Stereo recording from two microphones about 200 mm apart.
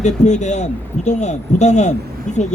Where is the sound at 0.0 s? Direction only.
35° left (ahead or behind).